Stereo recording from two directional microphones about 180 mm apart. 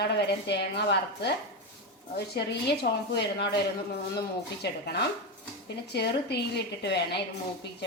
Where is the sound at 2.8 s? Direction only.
65° left (ahead or behind).